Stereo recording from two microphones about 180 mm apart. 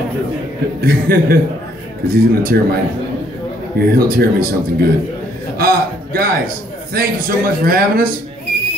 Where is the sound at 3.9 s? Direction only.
55° right (ahead or behind).